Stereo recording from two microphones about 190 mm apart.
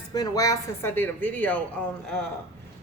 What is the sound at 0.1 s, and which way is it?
Speech, 20° left (ahead or behind).